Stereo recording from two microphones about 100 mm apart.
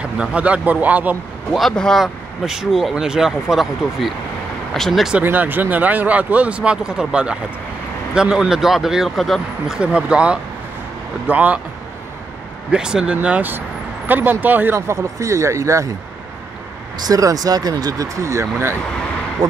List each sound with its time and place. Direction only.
0.0 s speech: 10° right (ahead or behind)
1.5 s speech: 5° left (ahead or behind)
5.1 s speech: 15° right (ahead or behind)
12.7 s speech: 10° right (ahead or behind); by 15.9 s 30° right (ahead or behind)
17.0 s speech: 35° right (ahead or behind)